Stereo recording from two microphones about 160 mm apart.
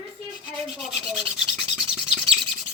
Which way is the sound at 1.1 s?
Centre (ahead or behind).